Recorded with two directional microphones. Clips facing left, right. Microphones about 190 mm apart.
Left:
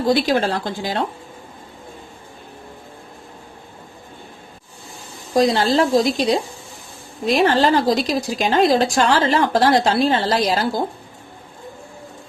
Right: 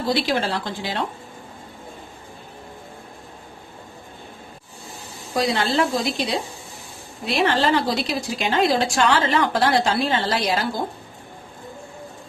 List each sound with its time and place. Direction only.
0.1 s a woman's voice: 45° left (ahead or behind)
5.3 s speech: 35° left (ahead or behind)